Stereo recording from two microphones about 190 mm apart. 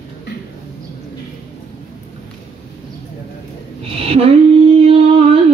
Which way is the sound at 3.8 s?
30° right (ahead or behind).